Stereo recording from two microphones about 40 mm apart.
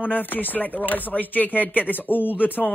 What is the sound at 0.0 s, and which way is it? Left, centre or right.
Speech, left.